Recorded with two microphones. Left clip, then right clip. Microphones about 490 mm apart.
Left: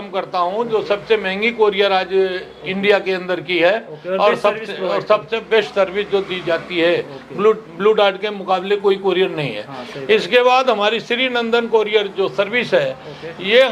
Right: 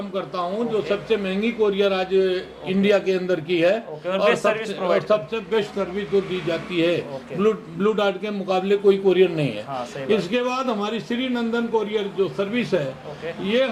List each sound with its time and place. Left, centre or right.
0.1 s speech: left
4.1 s a man's voice: right
4.7 s speech: left
6.5 s speech: left
10.1 s a man's voice: left